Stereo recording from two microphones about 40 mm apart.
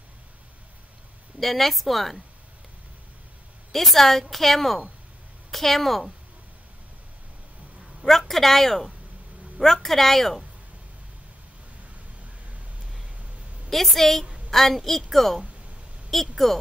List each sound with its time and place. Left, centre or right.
1.4 s a woman's voice: centre
3.7 s a woman's voice: centre
8.0 s a sound: centre
8.3 s speech: centre
13.7 s a woman's voice: centre